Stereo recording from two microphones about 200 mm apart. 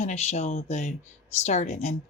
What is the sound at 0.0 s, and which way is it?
Speech, 35° left (ahead or behind).